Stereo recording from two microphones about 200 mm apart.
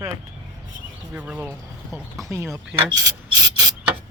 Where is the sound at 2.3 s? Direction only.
10° right (ahead or behind).